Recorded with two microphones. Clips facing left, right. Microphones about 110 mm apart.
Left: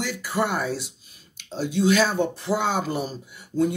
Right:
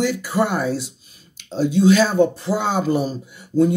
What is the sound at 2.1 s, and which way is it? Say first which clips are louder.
Speech: right 6 dB; 35° right (ahead or behind).